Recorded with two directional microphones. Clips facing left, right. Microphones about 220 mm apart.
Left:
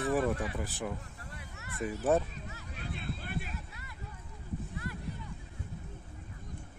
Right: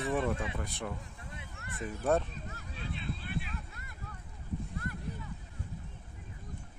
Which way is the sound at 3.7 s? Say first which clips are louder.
Even; 50° right (ahead or behind).